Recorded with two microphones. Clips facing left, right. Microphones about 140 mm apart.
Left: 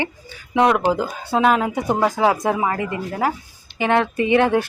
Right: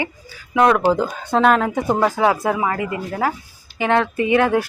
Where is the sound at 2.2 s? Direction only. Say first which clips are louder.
Even; 25° left (ahead or behind).